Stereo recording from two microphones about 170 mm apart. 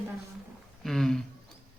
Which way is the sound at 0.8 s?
Centre (ahead or behind).